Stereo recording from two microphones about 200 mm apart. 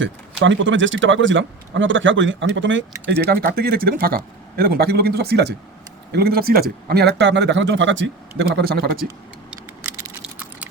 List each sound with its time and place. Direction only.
0.0 s speech: 65° right (ahead or behind); by 9.0 s 50° right (ahead or behind)